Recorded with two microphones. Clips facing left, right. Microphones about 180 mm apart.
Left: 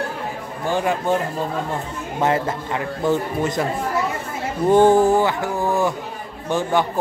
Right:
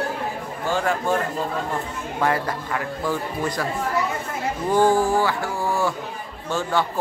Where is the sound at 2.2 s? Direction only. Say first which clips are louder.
Left 3 dB; 25° left (ahead or behind).